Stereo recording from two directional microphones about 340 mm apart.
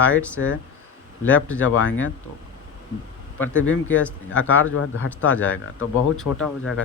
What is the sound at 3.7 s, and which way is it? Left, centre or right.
Speech, left.